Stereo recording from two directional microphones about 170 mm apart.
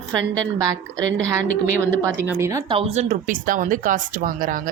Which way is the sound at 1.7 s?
15° right (ahead or behind).